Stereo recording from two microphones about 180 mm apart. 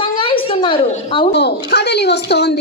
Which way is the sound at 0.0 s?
30° left (ahead or behind).